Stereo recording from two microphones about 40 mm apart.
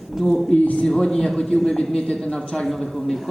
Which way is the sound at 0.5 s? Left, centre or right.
Left.